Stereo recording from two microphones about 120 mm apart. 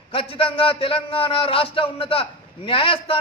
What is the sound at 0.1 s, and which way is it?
A man's voice, 50° left (ahead or behind).